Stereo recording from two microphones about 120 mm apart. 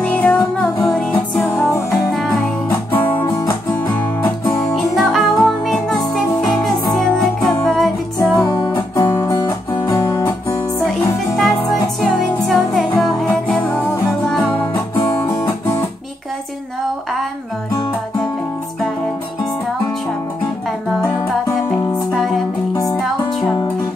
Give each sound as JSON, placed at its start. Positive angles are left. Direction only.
{"t": 0.0, "sound": "music", "side_deg": 15}
{"t": 4.7, "sound": "music", "side_deg": 0}
{"t": 8.5, "sound": "music", "side_deg": 30}
{"t": 9.3, "sound": "music", "side_deg": 35}
{"t": 9.9, "sound": "guitar", "side_deg": 25}
{"t": 12.0, "sound": "music", "side_deg": 0}
{"t": 13.6, "sound": "music", "side_deg": 15}